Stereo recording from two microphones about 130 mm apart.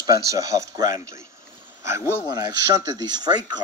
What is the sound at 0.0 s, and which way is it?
Speech, 25° right (ahead or behind).